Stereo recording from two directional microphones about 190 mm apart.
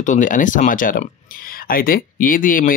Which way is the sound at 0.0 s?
40° left (ahead or behind).